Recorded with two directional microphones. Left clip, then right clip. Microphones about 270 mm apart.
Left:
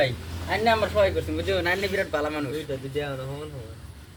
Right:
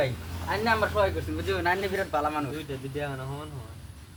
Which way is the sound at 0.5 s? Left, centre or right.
Centre.